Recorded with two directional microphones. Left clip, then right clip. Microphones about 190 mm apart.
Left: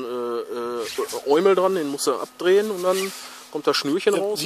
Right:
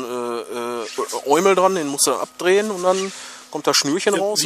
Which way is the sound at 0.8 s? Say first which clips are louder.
Right 2 dB; 35° left (ahead or behind).